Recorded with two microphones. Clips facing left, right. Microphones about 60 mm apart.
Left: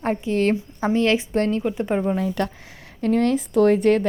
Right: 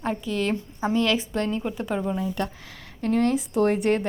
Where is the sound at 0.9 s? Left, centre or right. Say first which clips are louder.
Left 4 dB; left.